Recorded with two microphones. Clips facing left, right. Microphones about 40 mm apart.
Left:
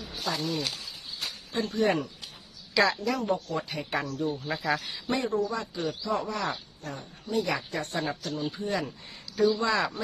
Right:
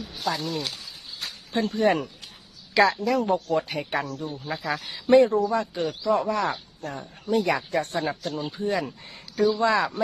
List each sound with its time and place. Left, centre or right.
0.2 s a woman's voice: centre
1.7 s speech: right
2.7 s a woman's voice: centre
3.2 s speech: right
4.2 s speech: centre
5.0 s speech: right
8.5 s speech: right
9.3 s speech: right